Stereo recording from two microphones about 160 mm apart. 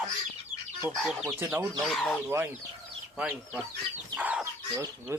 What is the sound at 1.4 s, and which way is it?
Speech, 10° right (ahead or behind).